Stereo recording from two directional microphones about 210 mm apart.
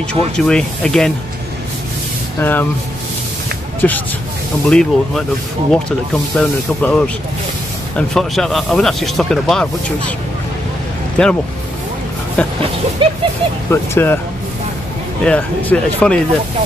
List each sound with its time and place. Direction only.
0.1 s speech: 5° left (ahead or behind)
2.4 s speech: 10° left (ahead or behind)
3.8 s speech: 5° left (ahead or behind)
11.2 s speech: 5° left (ahead or behind)
12.4 s speech: 5° left (ahead or behind)
13.0 s a sound: 25° right (ahead or behind)
13.7 s speech: 10° left (ahead or behind)
15.2 s speech: 5° left (ahead or behind)